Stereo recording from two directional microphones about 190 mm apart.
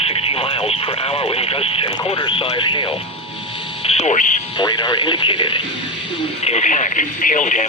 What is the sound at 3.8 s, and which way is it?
Speech, 35° left (ahead or behind).